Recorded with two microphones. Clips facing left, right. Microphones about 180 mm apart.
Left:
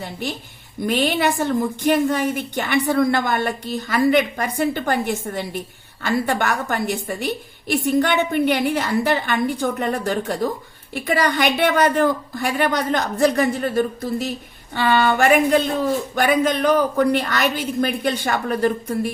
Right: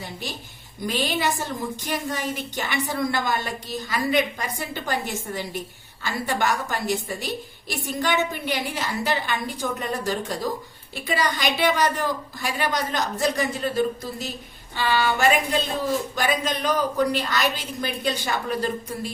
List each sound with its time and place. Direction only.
0.0 s a woman's voice: 60° left (ahead or behind)